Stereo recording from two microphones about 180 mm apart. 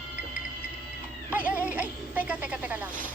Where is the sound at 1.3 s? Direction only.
10° right (ahead or behind).